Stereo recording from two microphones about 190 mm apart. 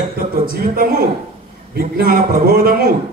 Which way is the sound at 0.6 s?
50° right (ahead or behind).